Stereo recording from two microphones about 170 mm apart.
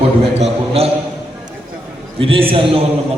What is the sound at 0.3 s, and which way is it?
Speech, 35° right (ahead or behind).